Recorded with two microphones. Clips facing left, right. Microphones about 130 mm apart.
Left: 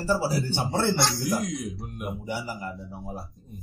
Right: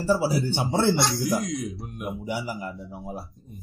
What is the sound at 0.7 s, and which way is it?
Speech, 20° right (ahead or behind).